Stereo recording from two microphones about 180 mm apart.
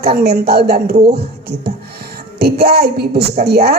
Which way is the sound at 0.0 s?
60° right (ahead or behind).